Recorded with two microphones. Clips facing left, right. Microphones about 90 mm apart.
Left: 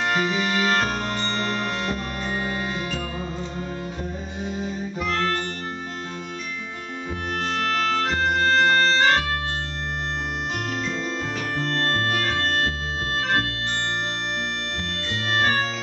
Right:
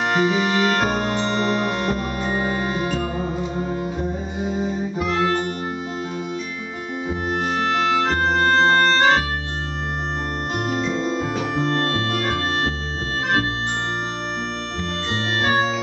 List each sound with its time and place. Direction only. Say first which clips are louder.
0.1 s music: right 4 dB; 5° right (ahead or behind)
4.4 s music: right 5 dB; 5° right (ahead or behind)
7.5 s music: right 3 dB; 15° right (ahead or behind)
8.0 s music: right 3 dB; 40° right (ahead or behind)
8.9 s music: right 3 dB; 5° right (ahead or behind)
10.7 s music: right 5 dB; 5° right (ahead or behind)
15.3 s music: right 2 dB; 5° right (ahead or behind)